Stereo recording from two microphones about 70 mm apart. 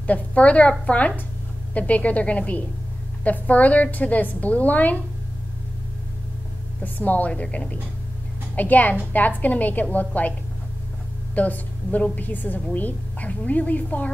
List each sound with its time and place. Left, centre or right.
0.0 s a woman's voice: left
6.8 s a woman's voice: left
11.3 s a woman's voice: left